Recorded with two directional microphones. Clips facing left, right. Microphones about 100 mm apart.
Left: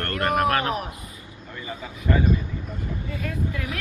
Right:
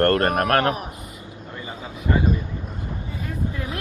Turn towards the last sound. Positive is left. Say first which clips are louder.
# even
turn(degrees=-30)  # may be behind; listen again after turning